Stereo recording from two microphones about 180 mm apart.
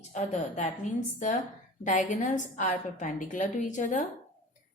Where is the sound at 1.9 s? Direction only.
45° left (ahead or behind).